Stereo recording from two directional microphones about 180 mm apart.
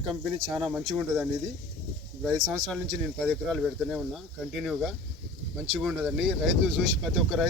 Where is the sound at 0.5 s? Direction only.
5° right (ahead or behind).